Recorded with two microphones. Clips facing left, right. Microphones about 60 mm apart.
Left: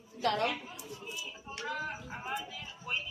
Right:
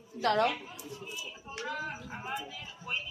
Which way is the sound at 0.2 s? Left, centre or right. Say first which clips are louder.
Right 4 dB; right.